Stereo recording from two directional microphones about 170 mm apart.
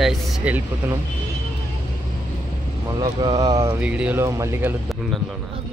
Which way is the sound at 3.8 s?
5° right (ahead or behind).